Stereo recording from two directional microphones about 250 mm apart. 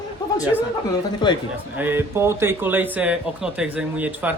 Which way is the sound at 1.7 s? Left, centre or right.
Centre.